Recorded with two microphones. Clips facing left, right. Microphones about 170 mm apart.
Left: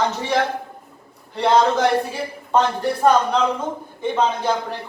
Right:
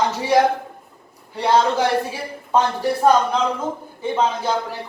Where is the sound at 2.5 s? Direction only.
10° right (ahead or behind).